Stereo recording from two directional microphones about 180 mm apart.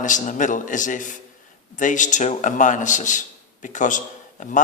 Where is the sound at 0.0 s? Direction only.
45° left (ahead or behind).